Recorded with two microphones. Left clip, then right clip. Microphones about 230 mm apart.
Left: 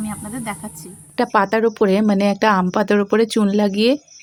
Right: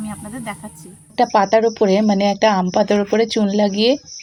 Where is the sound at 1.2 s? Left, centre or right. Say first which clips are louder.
Right 3 dB; centre.